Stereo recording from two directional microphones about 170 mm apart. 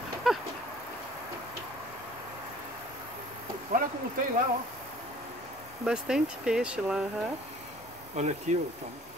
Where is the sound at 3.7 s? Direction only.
60° right (ahead or behind).